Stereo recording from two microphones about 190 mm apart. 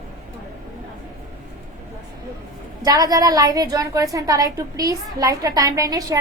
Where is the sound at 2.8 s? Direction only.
20° right (ahead or behind).